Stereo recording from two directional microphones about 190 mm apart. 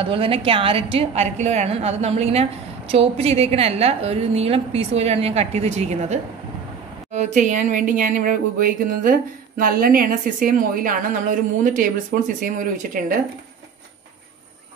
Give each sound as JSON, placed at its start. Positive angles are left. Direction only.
{"t": 0.0, "sound": "a woman's voice", "side_deg": -30}